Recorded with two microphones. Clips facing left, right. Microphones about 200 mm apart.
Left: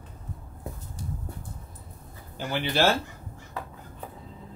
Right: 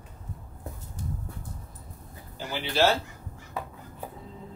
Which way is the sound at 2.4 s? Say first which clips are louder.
Even; 55° left (ahead or behind).